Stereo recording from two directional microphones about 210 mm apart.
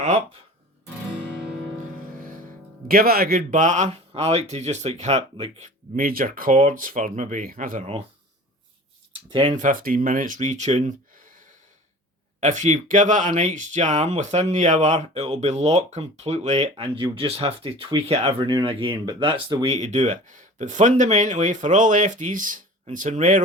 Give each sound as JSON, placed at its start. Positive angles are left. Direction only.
{"t": 2.9, "sound": "speech", "side_deg": -45}
{"t": 7.8, "sound": "speech", "side_deg": -30}
{"t": 9.3, "sound": "speech", "side_deg": -30}
{"t": 12.4, "sound": "speech", "side_deg": -35}